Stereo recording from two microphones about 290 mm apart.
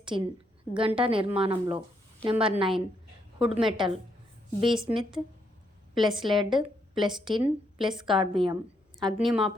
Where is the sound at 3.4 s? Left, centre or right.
Centre.